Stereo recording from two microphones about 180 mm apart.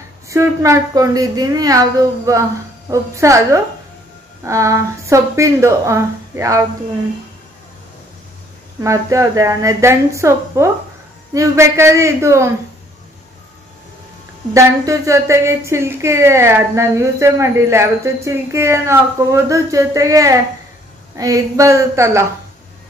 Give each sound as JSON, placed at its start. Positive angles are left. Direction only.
{"t": 0.3, "sound": "a woman's voice", "side_deg": -15}
{"t": 8.8, "sound": "speech", "side_deg": -15}
{"t": 14.5, "sound": "speech", "side_deg": -15}